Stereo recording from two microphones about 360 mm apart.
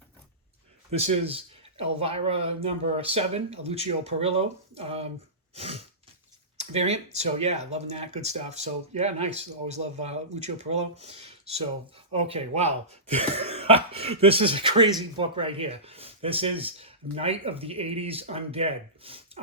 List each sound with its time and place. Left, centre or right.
0.9 s speech: centre